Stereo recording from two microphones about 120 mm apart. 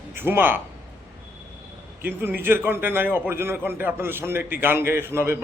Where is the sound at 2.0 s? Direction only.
15° right (ahead or behind).